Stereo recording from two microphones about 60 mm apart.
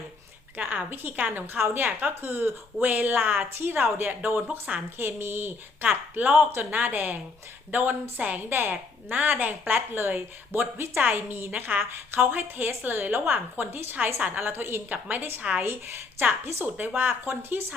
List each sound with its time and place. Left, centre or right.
0.5 s a woman's voice: right
15.6 s a woman's voice: right